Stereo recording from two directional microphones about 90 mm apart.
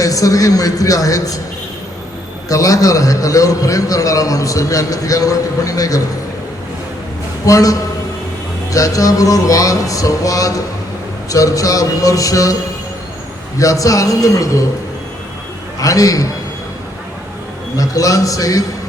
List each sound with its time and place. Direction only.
0.0 s a man's voice: 40° left (ahead or behind)
2.5 s a man's voice: 40° left (ahead or behind)
7.4 s a man's voice: 40° left (ahead or behind)
13.6 s a man's voice: 40° left (ahead or behind)
15.8 s a man's voice: 40° left (ahead or behind)
17.7 s a man's voice: 40° left (ahead or behind)